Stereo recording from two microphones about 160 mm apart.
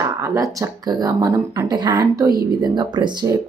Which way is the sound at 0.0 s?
15° right (ahead or behind).